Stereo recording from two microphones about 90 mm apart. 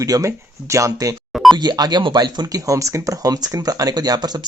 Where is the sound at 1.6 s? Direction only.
50° right (ahead or behind).